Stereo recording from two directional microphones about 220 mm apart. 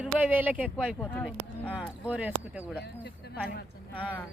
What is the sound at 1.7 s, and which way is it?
Speech, 5° right (ahead or behind).